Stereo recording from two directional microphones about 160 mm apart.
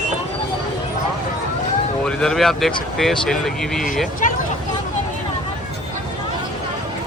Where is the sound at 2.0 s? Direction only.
5° left (ahead or behind).